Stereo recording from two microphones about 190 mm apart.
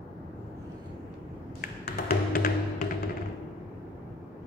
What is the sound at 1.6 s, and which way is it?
Music, 50° left (ahead or behind).